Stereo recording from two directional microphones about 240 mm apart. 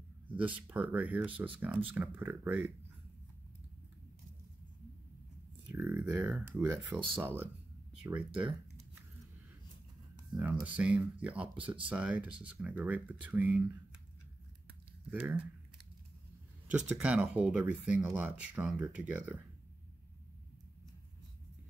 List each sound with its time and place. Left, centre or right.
0.3 s speech: centre
5.8 s speech: centre
10.3 s speech: centre
11.4 s speech: right
11.9 s speech: centre
15.0 s speech: centre
16.9 s speech: centre